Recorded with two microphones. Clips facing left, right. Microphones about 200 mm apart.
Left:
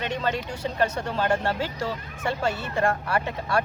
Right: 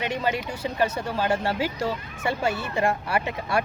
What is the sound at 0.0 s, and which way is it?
Speech, 10° right (ahead or behind).